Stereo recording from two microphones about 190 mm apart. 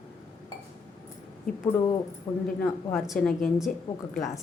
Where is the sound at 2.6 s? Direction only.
Centre (ahead or behind).